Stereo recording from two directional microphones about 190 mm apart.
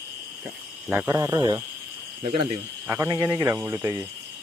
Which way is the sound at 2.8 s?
15° right (ahead or behind).